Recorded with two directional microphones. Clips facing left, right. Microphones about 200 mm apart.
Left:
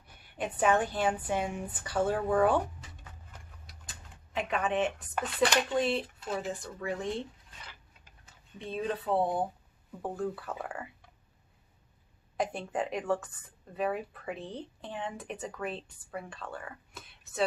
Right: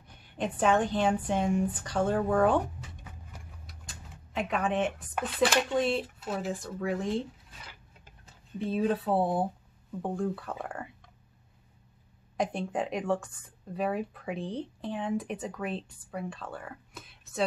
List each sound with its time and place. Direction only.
0.1 s speech: 5° left (ahead or behind)
3.6 s speech: centre (ahead or behind)
12.4 s speech: centre (ahead or behind)